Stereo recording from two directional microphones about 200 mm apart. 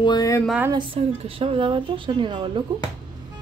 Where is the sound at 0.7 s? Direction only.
25° right (ahead or behind).